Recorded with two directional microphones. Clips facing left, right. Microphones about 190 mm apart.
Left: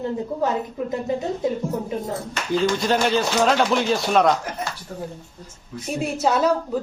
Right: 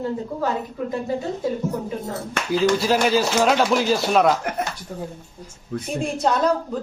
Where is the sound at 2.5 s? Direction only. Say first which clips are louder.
Right 1 dB; 5° right (ahead or behind).